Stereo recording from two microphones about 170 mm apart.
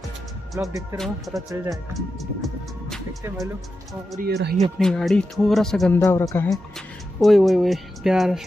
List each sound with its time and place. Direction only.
0.6 s speech: 15° right (ahead or behind)
0.9 s speech: centre (ahead or behind)
1.5 s speech: 20° right (ahead or behind)
2.0 s music: centre (ahead or behind)
4.2 s speech: 70° right (ahead or behind)
4.7 s speech: centre (ahead or behind)
5.9 s speech: 15° left (ahead or behind)
7.2 s speech: centre (ahead or behind)